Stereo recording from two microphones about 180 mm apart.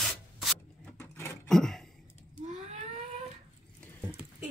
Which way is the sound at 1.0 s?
15° left (ahead or behind).